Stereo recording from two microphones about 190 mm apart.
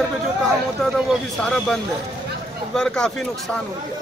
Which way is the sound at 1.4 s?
5° left (ahead or behind).